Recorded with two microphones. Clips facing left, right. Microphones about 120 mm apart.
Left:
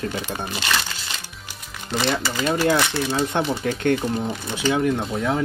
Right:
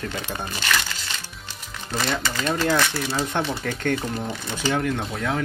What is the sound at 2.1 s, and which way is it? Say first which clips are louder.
Speech: left 2 dB; 10° left (ahead or behind).